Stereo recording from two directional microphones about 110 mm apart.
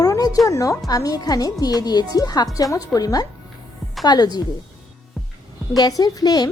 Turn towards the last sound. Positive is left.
turn(degrees=35)  # may be behind; listen again after turning